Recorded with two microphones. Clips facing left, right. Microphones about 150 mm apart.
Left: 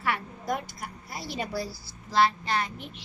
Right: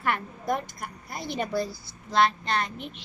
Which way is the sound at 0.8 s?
55° right (ahead or behind).